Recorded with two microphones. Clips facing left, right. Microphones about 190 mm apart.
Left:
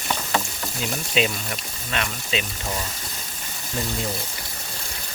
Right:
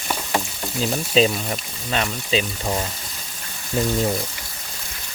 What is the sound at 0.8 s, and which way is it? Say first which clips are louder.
Speech: right 6 dB; 35° right (ahead or behind).